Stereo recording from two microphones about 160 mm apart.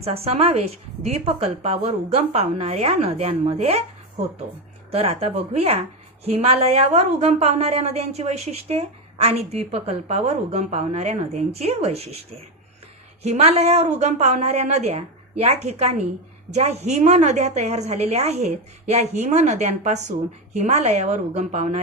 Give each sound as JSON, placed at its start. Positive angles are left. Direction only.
{"t": 0.0, "sound": "a woman's voice", "side_deg": -40}